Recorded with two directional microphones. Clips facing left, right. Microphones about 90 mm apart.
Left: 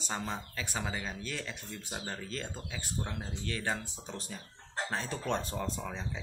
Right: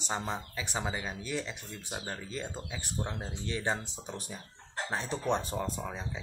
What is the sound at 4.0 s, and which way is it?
Speech, 15° right (ahead or behind).